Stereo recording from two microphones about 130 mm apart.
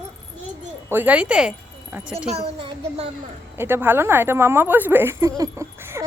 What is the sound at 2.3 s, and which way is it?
Speech, 50° right (ahead or behind).